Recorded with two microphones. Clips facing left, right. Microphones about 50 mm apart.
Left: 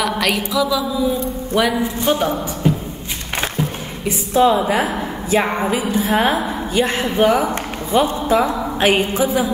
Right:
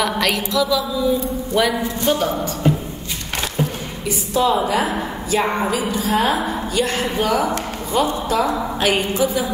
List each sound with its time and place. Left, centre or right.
0.0 s a sound: centre
2.0 s a woman's voice: centre
4.0 s a woman's voice: left